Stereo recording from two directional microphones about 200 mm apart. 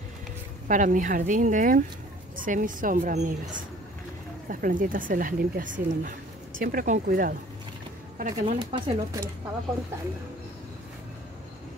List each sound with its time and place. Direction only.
0.7 s speech: 40° right (ahead or behind)
8.2 s speech: 30° right (ahead or behind)